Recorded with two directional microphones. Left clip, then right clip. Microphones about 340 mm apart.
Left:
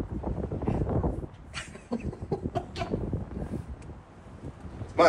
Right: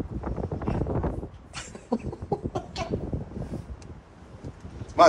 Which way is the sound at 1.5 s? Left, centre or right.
Centre.